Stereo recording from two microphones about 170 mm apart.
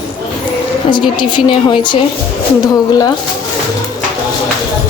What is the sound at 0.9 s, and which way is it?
A woman's voice, 30° left (ahead or behind).